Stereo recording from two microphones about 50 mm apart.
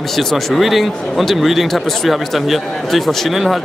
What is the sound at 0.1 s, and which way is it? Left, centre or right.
Speech, centre.